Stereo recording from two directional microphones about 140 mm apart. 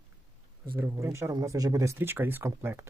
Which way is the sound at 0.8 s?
20° right (ahead or behind).